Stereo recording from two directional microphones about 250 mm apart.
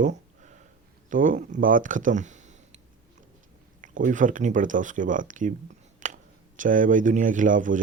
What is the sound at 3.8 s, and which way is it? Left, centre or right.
Speech, right.